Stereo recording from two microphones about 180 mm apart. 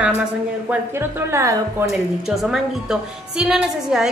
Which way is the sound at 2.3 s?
Centre (ahead or behind).